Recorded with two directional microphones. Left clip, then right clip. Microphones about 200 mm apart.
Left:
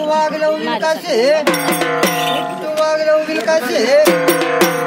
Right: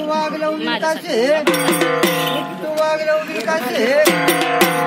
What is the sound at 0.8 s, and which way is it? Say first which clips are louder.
Speech: left 3 dB; 30° left (ahead or behind).